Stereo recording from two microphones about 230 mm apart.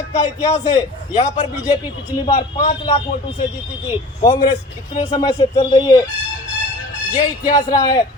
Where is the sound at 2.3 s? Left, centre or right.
Left.